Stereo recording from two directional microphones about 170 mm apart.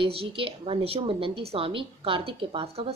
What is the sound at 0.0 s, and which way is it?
A woman's voice, 35° right (ahead or behind).